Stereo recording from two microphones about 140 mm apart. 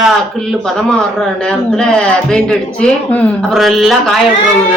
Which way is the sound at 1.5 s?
5° left (ahead or behind).